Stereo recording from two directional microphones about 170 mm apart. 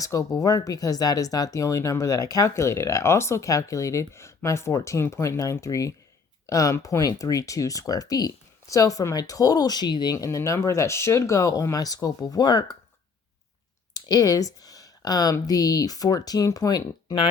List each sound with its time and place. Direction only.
0.0 s speech: 20° left (ahead or behind)
13.9 s speech: 20° left (ahead or behind)